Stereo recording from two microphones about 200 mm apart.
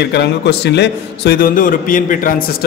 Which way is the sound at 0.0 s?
55° left (ahead or behind).